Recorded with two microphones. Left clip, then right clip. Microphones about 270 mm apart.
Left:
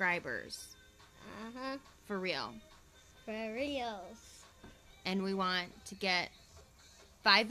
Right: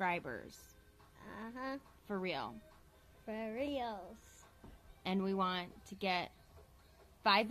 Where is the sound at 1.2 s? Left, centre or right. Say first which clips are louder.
Left 1 dB; left.